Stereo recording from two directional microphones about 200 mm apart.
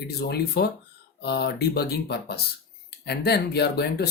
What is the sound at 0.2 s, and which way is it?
Speech, 50° left (ahead or behind).